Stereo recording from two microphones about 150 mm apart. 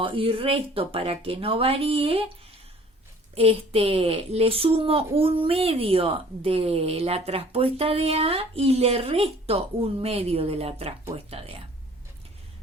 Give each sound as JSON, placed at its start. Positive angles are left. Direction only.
{"t": 0.0, "sound": "speech", "side_deg": -35}
{"t": 3.3, "sound": "speech", "side_deg": -40}